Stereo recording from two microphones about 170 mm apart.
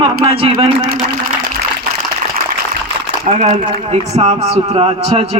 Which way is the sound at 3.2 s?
45° right (ahead or behind).